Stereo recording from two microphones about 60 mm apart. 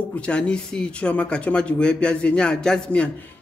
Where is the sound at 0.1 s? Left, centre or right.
Centre.